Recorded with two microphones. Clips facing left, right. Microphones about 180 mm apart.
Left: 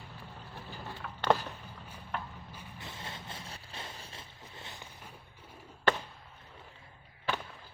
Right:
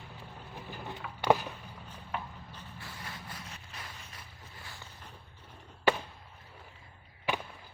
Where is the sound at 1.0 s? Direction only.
10° right (ahead or behind).